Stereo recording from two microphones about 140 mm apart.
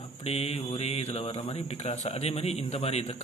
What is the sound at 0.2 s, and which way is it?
Speech, 50° left (ahead or behind).